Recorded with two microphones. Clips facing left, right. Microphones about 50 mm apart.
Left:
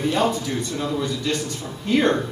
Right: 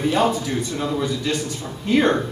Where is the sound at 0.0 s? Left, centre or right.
Centre.